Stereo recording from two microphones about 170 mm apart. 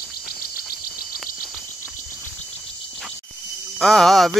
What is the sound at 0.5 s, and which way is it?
Cricket, 60° left (ahead or behind).